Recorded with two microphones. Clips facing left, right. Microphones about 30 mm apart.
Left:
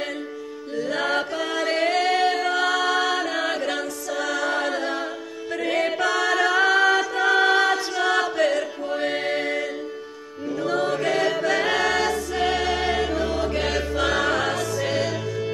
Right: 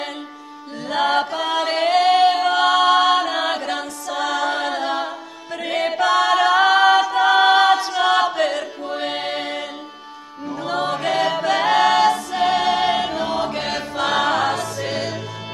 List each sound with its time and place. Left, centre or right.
0.7 s chant: right
5.6 s a capella: centre
8.8 s music: right
10.5 s choir: right
13.6 s music: centre